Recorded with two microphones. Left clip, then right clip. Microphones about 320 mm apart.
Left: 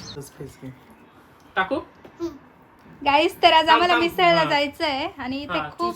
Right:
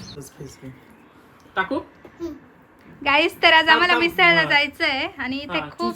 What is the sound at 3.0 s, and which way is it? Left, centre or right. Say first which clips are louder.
A woman's voice: even; centre.